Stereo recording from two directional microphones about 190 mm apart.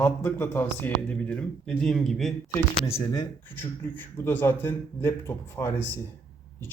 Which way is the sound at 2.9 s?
20° left (ahead or behind).